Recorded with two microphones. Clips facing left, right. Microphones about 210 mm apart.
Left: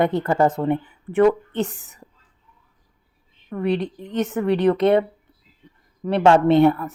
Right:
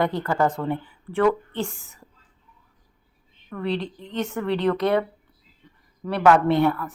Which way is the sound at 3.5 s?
20° left (ahead or behind).